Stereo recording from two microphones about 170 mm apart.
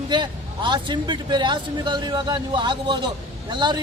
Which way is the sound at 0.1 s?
25° right (ahead or behind).